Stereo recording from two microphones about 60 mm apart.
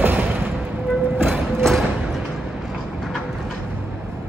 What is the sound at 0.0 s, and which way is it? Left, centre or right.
Music, right.